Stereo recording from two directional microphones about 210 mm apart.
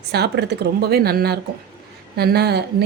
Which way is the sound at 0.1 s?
50° right (ahead or behind).